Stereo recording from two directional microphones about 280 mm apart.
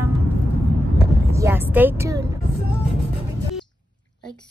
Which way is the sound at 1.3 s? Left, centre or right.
Centre.